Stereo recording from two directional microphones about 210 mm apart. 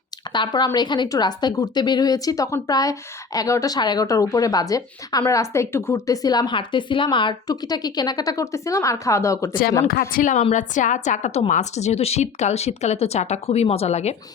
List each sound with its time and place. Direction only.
0.3 s a woman's voice: 20° left (ahead or behind)
9.8 s a woman's voice: 45° left (ahead or behind)